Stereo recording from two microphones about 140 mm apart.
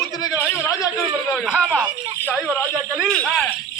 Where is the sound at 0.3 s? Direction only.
15° left (ahead or behind).